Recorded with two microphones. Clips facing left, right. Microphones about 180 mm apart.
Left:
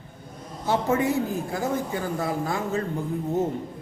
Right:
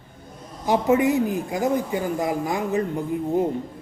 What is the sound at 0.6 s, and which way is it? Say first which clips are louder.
A woman's voice: right 4 dB; 15° right (ahead or behind).